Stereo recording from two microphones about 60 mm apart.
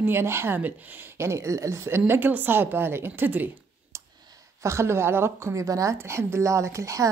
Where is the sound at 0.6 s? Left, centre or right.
Right.